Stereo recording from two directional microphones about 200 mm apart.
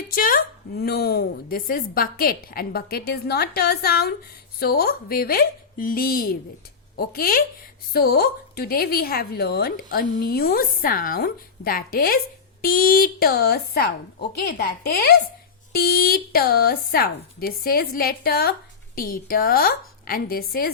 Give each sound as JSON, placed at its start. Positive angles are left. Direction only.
{"t": 0.1, "sound": "a woman's voice", "side_deg": 45}